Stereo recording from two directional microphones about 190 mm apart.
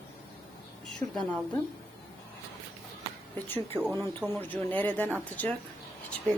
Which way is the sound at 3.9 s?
15° right (ahead or behind).